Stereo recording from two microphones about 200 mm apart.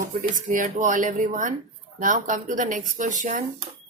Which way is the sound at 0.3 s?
40° right (ahead or behind).